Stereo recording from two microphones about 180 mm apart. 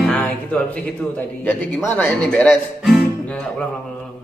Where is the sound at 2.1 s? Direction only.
5° left (ahead or behind).